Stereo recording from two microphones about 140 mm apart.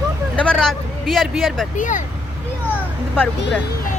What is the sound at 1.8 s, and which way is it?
Speech, 65° left (ahead or behind).